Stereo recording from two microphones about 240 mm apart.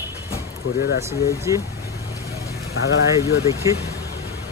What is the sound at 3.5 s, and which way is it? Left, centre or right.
Speech, centre.